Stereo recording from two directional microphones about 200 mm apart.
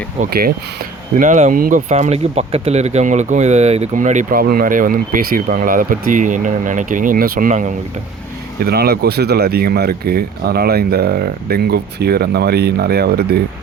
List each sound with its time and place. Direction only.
0.2 s speech: 50° right (ahead or behind)